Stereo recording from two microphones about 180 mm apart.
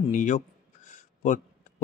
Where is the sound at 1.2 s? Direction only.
45° left (ahead or behind).